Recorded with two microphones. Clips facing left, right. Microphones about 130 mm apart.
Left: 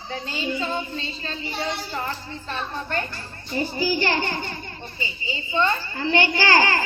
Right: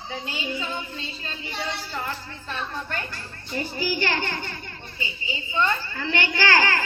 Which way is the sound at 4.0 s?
15° left (ahead or behind).